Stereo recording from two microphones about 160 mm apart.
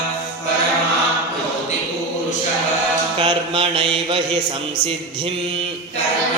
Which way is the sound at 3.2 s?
35° right (ahead or behind).